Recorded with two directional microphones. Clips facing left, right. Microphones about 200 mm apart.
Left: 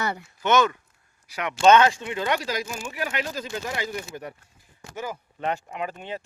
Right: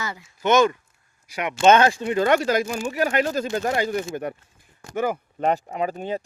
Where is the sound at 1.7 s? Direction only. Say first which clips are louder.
Right 1 dB; 35° right (ahead or behind); by 5.5 s 60° right (ahead or behind).